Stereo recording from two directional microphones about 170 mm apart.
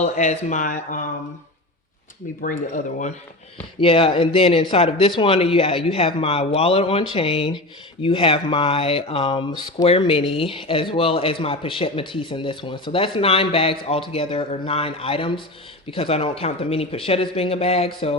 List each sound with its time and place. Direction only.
0.0 s speech: 45° left (ahead or behind)
2.4 s speech: 50° left (ahead or behind)
3.8 s a man's voice: 35° left (ahead or behind)